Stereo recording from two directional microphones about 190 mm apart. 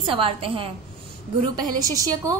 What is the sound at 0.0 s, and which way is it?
A woman's voice, 30° right (ahead or behind).